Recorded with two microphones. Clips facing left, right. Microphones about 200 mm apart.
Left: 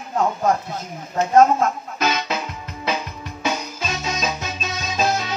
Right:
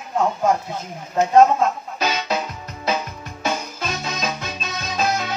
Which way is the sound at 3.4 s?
55° right (ahead or behind).